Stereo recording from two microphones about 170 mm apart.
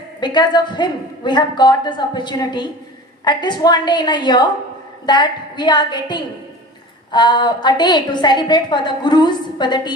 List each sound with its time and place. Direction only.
0.2 s a woman's voice: 25° left (ahead or behind)